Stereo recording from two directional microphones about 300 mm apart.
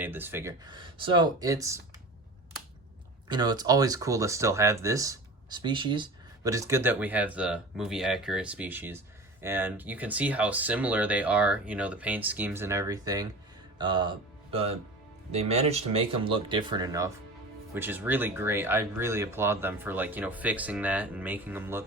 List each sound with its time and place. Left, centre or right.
0.0 s speech: centre
3.2 s speech: centre